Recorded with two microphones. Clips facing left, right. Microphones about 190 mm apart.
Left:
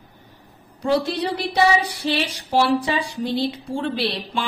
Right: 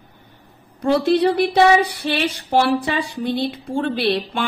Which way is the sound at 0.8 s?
55° right (ahead or behind).